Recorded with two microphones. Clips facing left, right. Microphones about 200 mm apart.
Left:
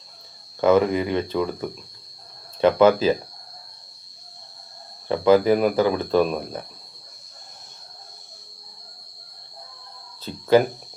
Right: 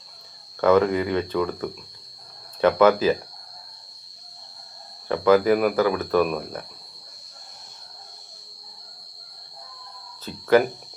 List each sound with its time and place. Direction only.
0.7 s speech: 15° left (ahead or behind)
2.6 s speech: 25° left (ahead or behind)
5.0 s speech: 25° left (ahead or behind)
10.3 s cricket: 25° left (ahead or behind)